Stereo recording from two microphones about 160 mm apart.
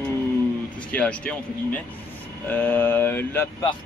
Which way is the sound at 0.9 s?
10° left (ahead or behind).